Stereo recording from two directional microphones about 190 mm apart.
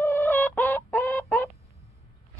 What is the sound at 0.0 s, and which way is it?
Chicken, 10° left (ahead or behind).